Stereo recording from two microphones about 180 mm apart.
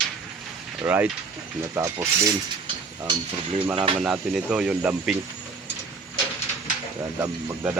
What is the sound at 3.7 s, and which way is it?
Speech, 30° right (ahead or behind).